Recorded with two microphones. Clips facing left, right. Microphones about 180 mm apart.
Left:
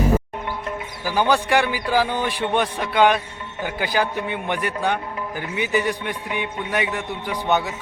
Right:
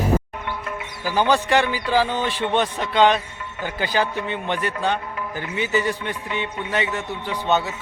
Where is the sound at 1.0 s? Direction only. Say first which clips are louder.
Even; 10° left (ahead or behind).